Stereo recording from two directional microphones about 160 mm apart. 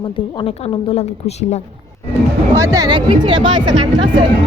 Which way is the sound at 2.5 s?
20° right (ahead or behind).